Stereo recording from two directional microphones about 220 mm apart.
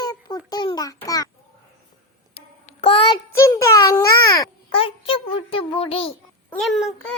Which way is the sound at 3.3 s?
10° left (ahead or behind).